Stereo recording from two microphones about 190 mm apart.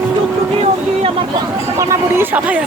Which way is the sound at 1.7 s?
15° right (ahead or behind).